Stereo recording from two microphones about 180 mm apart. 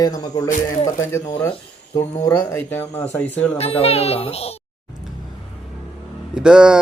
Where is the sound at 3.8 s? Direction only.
35° left (ahead or behind).